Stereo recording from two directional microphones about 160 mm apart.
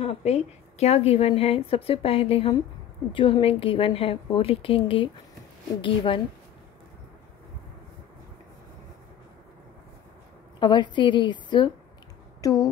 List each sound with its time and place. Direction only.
0.0 s a woman's voice: 40° left (ahead or behind)
10.6 s a woman's voice: 30° left (ahead or behind)